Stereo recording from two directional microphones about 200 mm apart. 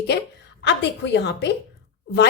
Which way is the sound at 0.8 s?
60° left (ahead or behind).